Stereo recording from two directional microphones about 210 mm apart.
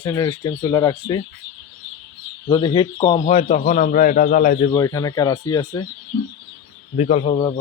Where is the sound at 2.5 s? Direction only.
25° left (ahead or behind); by 4.5 s 40° left (ahead or behind).